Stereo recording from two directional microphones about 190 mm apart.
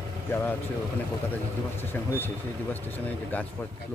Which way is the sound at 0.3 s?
10° left (ahead or behind).